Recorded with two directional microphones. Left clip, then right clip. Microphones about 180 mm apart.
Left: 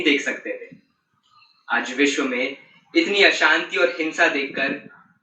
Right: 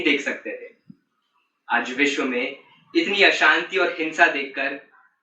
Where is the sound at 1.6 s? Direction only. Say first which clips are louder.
Left 1 dB; 15° right (ahead or behind).